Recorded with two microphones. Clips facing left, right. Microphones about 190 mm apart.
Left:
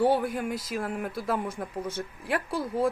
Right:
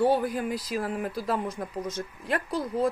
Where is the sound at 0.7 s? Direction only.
5° left (ahead or behind).